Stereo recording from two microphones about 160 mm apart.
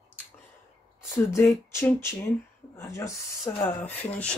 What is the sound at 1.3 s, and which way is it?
Speech, 20° left (ahead or behind).